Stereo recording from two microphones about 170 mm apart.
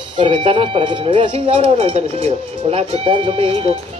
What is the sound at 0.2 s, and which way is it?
Speech, 30° right (ahead or behind).